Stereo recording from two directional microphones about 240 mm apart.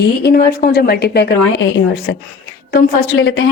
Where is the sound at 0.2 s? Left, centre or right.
Left.